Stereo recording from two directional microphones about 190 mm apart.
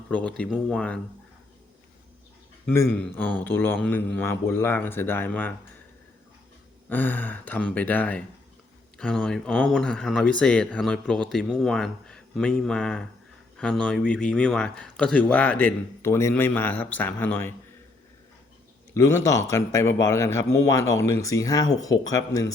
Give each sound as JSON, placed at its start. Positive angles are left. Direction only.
{"t": 0.1, "sound": "speech", "side_deg": 5}
{"t": 2.7, "sound": "a man's voice", "side_deg": 10}
{"t": 6.8, "sound": "a man's voice", "side_deg": 10}
{"t": 18.9, "sound": "a man's voice", "side_deg": 15}